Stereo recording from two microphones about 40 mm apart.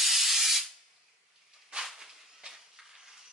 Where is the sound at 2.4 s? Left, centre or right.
Right.